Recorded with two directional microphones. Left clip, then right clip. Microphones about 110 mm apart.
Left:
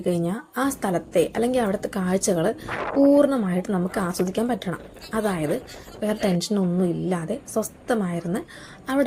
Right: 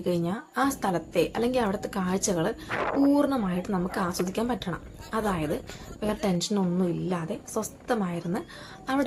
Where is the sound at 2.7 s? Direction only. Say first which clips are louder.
Left 5 dB; centre (ahead or behind).